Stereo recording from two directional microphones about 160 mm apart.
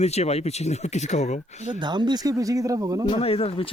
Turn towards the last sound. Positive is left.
turn(degrees=35)  # may be behind; listen again after turning